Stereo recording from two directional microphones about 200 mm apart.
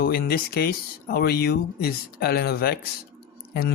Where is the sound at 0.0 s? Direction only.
50° left (ahead or behind).